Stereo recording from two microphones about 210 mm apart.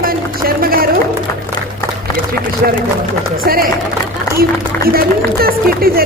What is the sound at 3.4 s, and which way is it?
Speech, 45° right (ahead or behind).